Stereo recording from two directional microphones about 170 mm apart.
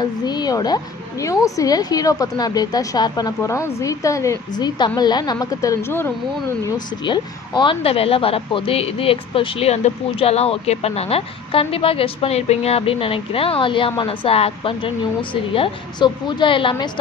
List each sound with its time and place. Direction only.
0.0 s a woman's voice: 25° left (ahead or behind)
7.1 s a woman's voice: 30° left (ahead or behind)